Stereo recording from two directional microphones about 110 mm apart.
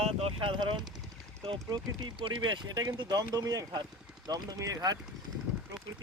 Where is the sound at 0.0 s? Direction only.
70° right (ahead or behind); by 0.9 s 45° right (ahead or behind).